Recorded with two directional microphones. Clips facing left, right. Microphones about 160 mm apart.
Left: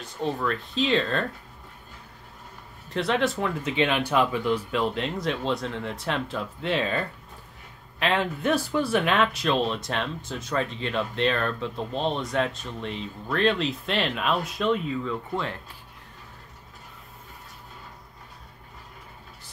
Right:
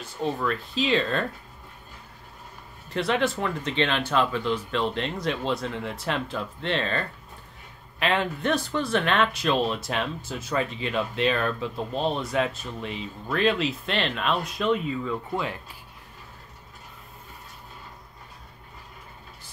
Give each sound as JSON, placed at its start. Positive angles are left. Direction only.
{"t": 0.0, "sound": "speech", "side_deg": 0}
{"t": 2.9, "sound": "speech", "side_deg": 0}